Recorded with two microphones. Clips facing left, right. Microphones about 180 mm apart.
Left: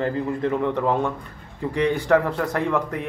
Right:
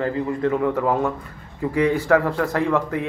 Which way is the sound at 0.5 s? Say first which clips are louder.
Even; 5° right (ahead or behind).